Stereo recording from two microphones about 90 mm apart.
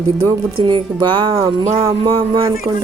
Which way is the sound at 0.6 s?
60° right (ahead or behind).